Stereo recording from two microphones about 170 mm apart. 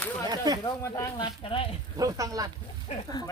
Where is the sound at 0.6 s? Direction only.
20° left (ahead or behind).